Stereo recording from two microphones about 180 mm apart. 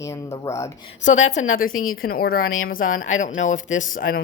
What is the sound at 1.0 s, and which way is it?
Speech, 40° left (ahead or behind).